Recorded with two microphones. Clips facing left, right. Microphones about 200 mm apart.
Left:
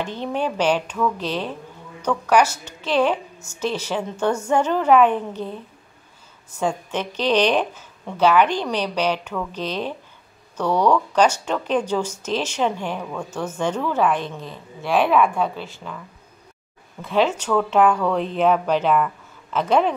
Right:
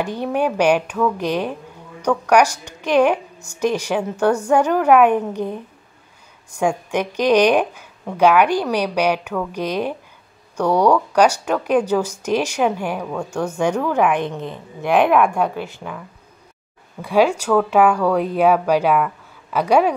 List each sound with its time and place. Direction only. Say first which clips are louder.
0.0 s a woman's voice: right 4 dB; 10° right (ahead or behind)
15.0 s a woman's voice: right 2 dB; 55° right (ahead or behind)
15.3 s a woman's voice: right 3 dB; 15° right (ahead or behind)
17.0 s a woman's voice: right 4 dB; 10° right (ahead or behind)